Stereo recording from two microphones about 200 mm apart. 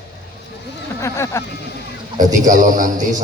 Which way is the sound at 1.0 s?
15° left (ahead or behind).